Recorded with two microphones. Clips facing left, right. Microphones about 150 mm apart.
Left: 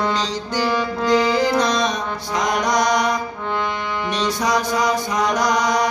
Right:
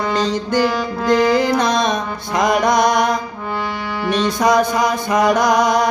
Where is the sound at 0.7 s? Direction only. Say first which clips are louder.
Right 2 dB; centre (ahead or behind).